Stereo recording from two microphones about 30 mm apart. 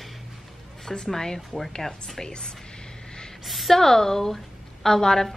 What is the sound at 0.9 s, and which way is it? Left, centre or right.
A woman's voice, centre.